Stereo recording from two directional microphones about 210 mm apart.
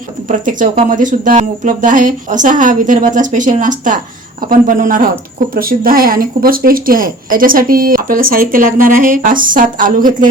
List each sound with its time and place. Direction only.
0.3 s speech: 40° right (ahead or behind)